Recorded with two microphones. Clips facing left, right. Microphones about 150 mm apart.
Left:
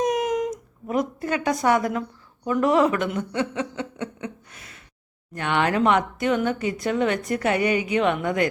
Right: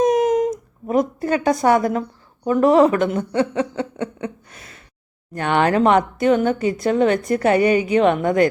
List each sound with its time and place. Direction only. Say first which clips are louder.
0.0 s speech: right 7 dB; 30° right (ahead or behind)